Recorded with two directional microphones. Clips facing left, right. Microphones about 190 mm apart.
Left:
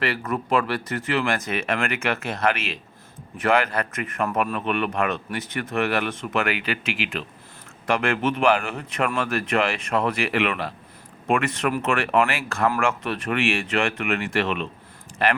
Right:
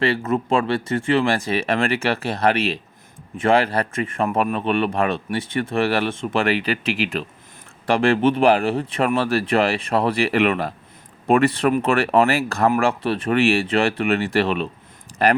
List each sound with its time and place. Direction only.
0.0 s speech: 25° right (ahead or behind)